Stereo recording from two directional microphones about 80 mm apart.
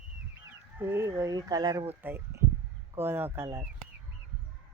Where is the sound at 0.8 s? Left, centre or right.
Right.